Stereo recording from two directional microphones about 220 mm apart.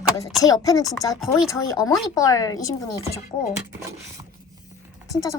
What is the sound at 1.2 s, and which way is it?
Speech, centre (ahead or behind).